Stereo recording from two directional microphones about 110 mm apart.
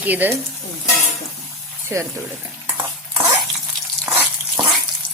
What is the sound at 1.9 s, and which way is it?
Speech, 25° right (ahead or behind).